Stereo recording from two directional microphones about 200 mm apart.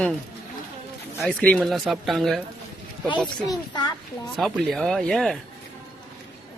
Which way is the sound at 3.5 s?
20° left (ahead or behind).